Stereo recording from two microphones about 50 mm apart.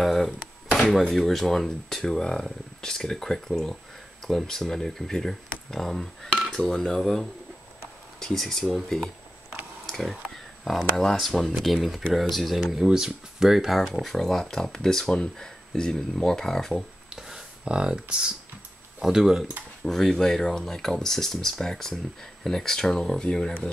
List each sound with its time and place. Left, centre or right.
0.0 s a sound: centre
1.1 s speech: centre
9.8 s a sound: centre
10.6 s speech: centre
12.7 s speech: centre
14.0 s speech: centre
17.1 s a sound: centre
17.6 s speech: centre
19.8 s speech: centre